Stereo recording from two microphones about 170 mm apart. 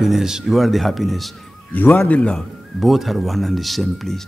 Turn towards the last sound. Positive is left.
turn(degrees=0)  # may be behind; listen again after turning